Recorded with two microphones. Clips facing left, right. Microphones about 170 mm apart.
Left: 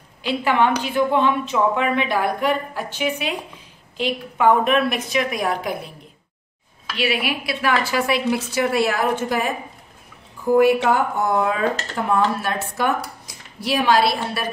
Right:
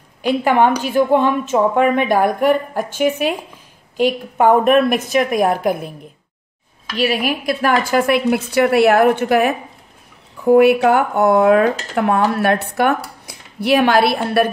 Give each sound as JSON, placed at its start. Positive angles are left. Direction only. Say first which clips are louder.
{"t": 0.2, "sound": "a woman's voice", "louder": "right 5 dB", "side_deg": -45}
{"t": 7.0, "sound": "a woman's voice", "louder": "right 5 dB", "side_deg": -40}